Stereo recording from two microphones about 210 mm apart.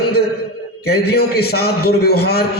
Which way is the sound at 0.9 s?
50° left (ahead or behind).